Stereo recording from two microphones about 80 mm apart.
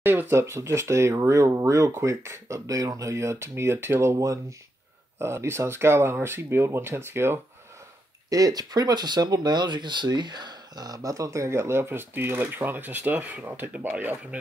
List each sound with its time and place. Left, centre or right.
0.0 s speech: right
8.3 s speech: right